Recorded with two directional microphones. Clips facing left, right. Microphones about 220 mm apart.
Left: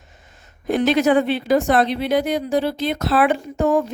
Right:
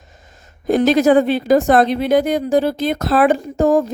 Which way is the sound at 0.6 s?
40° right (ahead or behind).